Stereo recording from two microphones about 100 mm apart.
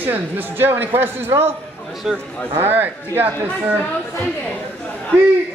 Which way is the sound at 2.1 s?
5° right (ahead or behind).